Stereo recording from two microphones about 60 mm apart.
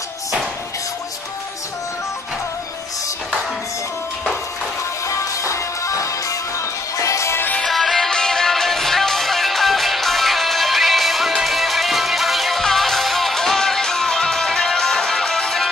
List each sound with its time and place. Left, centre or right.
5.0 s music: left
7.6 s music: centre